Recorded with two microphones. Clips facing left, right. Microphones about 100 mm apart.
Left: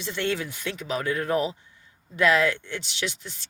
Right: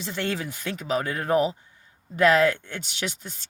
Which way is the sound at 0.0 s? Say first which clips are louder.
Left 1 dB; 40° right (ahead or behind).